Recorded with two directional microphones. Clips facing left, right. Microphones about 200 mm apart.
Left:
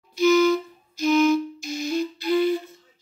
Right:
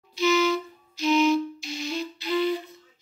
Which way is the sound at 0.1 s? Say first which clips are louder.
Left 5 dB; 50° left (ahead or behind).